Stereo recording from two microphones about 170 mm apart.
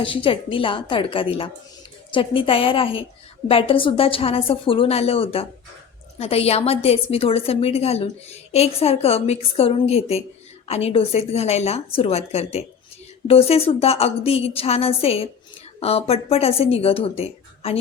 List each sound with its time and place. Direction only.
0.0 s a woman's voice: 30° left (ahead or behind)